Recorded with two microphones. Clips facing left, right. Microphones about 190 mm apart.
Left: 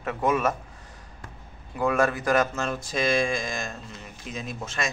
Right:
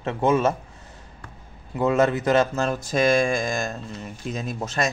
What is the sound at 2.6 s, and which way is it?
Speech, 40° right (ahead or behind).